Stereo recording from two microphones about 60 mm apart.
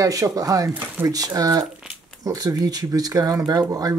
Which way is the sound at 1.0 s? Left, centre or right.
Right.